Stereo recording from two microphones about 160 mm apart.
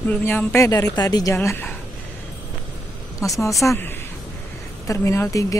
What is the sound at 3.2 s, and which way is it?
A woman's voice, 20° left (ahead or behind).